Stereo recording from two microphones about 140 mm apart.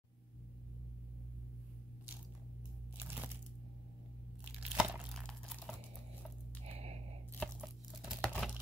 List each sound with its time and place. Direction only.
3.0 s crunch: 15° right (ahead or behind)
4.7 s crumpling: 10° right (ahead or behind)
5.1 s crumpling: 5° left (ahead or behind)
6.6 s a sound: 50° right (ahead or behind)
7.3 s tearing: centre (ahead or behind)